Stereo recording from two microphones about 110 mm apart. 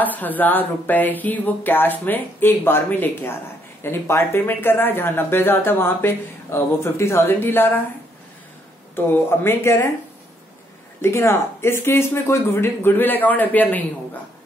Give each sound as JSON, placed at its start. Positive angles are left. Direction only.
{"t": 0.0, "sound": "speech", "side_deg": 15}
{"t": 8.9, "sound": "speech", "side_deg": 20}
{"t": 11.0, "sound": "speech", "side_deg": 25}